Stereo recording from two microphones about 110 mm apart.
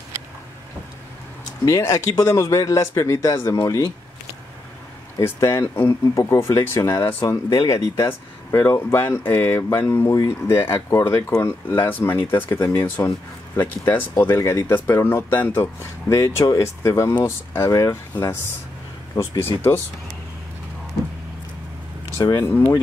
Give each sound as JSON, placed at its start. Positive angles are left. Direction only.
{"t": 1.7, "sound": "speech", "side_deg": 25}
{"t": 5.4, "sound": "speech", "side_deg": 25}
{"t": 7.4, "sound": "speech", "side_deg": 30}
{"t": 19.1, "sound": "speech", "side_deg": 20}
{"t": 22.4, "sound": "speech", "side_deg": 20}